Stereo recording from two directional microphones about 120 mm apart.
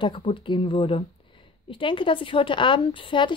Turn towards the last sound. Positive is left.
turn(degrees=45)  # may be behind; listen again after turning